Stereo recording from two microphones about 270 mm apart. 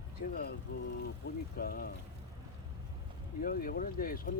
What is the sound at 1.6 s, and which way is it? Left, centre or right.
Speech, left.